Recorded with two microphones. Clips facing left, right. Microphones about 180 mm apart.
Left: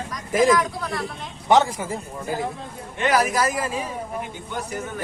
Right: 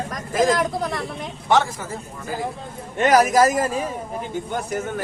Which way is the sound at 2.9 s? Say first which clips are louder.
Right 5 dB; 45° right (ahead or behind).